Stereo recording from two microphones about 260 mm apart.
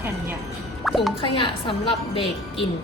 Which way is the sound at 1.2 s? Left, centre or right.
Centre.